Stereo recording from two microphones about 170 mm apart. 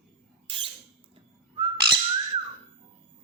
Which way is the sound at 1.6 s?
30° right (ahead or behind).